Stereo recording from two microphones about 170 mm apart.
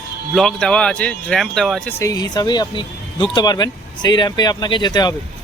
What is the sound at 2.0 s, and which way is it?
Speech, 20° left (ahead or behind).